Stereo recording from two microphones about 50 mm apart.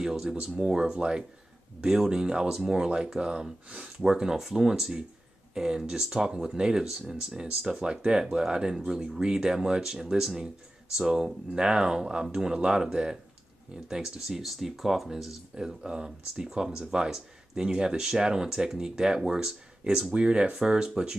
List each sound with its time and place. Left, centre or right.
0.0 s speech: centre
15.5 s speech: centre